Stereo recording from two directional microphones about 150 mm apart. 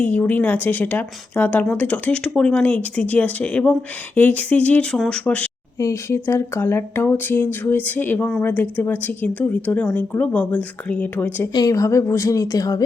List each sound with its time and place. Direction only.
0.0 s speech: 10° left (ahead or behind)
11.5 s a woman's voice: 25° left (ahead or behind)